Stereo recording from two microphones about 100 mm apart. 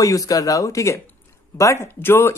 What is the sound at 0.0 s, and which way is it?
A man's voice, 35° left (ahead or behind).